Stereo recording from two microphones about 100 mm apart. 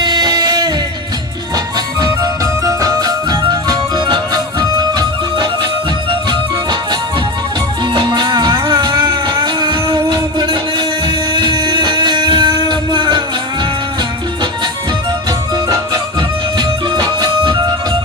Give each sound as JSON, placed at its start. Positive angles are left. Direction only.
{"t": 0.0, "sound": "a sound", "side_deg": -40}
{"t": 1.5, "sound": "music", "side_deg": -40}
{"t": 7.9, "sound": "music", "side_deg": -50}
{"t": 16.6, "sound": "music", "side_deg": -40}